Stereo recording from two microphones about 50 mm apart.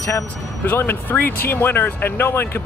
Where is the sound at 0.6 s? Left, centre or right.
Left.